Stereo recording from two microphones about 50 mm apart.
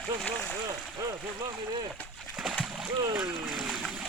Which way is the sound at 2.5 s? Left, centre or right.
Centre.